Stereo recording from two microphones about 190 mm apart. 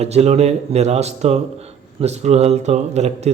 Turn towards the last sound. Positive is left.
turn(degrees=-35)  # may be behind; listen again after turning